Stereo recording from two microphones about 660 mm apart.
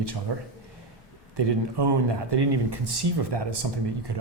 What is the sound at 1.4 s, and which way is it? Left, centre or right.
Speech, right.